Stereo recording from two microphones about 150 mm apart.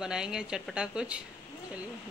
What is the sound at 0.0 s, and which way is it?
Speech, 5° right (ahead or behind).